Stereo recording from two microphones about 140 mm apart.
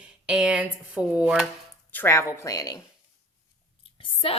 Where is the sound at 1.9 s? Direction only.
20° left (ahead or behind).